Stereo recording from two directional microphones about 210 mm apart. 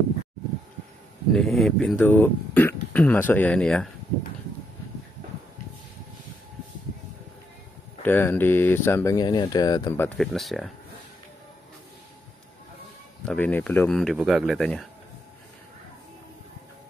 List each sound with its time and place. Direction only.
1.3 s speech: centre (ahead or behind)
8.0 s speech: 10° left (ahead or behind)
10.0 s speech: centre (ahead or behind)
13.2 s speech: 5° left (ahead or behind)